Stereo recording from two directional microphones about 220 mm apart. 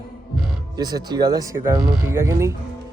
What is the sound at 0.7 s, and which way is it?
Speech, 20° right (ahead or behind).